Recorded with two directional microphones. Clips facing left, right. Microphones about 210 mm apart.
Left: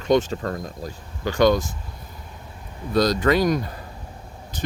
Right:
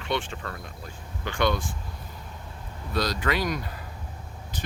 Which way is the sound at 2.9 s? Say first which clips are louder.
Left 8 dB; 45° left (ahead or behind).